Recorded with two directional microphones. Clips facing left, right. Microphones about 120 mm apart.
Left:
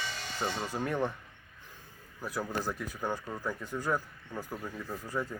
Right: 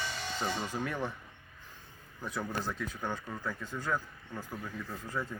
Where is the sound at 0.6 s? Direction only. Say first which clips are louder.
Left 3 dB; 10° left (ahead or behind).